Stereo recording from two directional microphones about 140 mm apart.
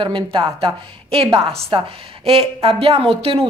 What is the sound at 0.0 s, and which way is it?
A woman's voice, 35° right (ahead or behind).